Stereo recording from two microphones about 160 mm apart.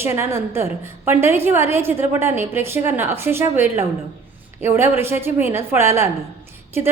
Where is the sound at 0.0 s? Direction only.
15° right (ahead or behind).